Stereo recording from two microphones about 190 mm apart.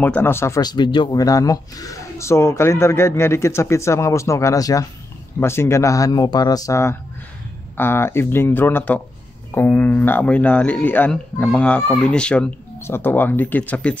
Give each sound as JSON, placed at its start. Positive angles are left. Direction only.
{"t": 0.0, "sound": "a man's voice", "side_deg": 10}